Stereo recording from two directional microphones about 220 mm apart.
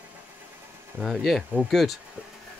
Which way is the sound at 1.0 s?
Centre (ahead or behind).